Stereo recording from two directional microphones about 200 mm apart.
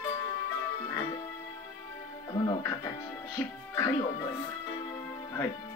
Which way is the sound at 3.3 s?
15° left (ahead or behind).